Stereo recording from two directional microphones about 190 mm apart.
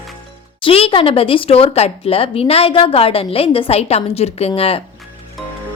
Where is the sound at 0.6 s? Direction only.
30° left (ahead or behind).